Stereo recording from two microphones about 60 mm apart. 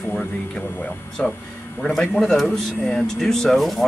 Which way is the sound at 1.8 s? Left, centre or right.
Centre.